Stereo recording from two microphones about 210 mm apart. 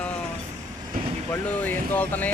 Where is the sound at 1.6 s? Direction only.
10° left (ahead or behind).